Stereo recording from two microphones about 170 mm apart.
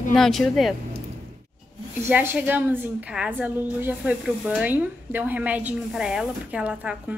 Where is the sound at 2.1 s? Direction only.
10° right (ahead or behind).